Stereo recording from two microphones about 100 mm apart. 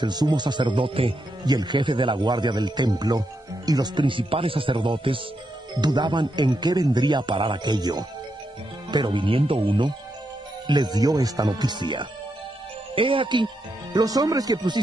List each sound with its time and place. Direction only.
0.0 s speech: 45° right (ahead or behind); by 1.1 s 65° right (ahead or behind)
1.4 s speech: 45° right (ahead or behind)
5.8 s speech: 45° right (ahead or behind)
10.7 s speech: 45° right (ahead or behind)
12.9 s speech: 60° right (ahead or behind)
13.9 s speech: 40° right (ahead or behind)